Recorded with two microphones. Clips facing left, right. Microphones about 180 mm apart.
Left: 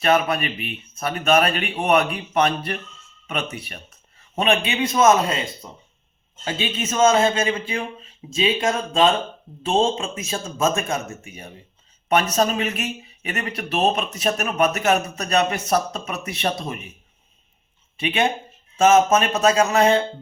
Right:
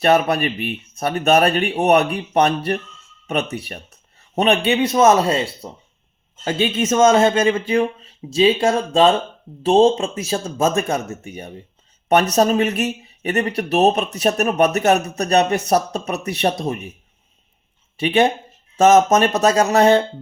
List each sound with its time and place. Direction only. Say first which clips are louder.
0.0 s speech: right 4 dB; 35° right (ahead or behind)
5.6 s speech: right 6 dB; 45° right (ahead or behind)
18.8 s speech: right 3 dB; 40° right (ahead or behind)